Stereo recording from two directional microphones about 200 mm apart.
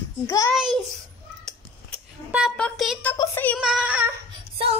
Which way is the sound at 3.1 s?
15° left (ahead or behind).